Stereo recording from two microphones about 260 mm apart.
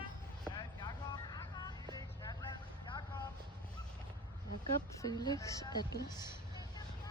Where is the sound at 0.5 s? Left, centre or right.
Centre.